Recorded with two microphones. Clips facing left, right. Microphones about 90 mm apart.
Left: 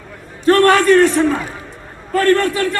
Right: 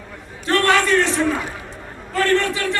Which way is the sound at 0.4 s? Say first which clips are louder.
Left 7 dB; 45° left (ahead or behind).